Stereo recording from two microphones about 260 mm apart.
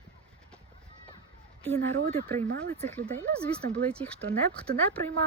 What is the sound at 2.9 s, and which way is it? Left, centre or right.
Speech, centre.